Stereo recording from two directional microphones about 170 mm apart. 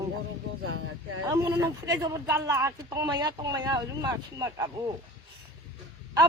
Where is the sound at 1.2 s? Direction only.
25° right (ahead or behind).